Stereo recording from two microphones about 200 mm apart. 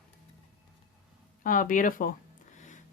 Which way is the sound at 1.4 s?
45° left (ahead or behind).